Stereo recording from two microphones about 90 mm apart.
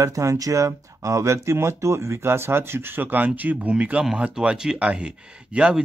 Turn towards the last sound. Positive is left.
turn(degrees=-10)  # may be behind; listen again after turning